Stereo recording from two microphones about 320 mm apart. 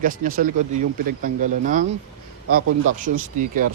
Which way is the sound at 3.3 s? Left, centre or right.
Right.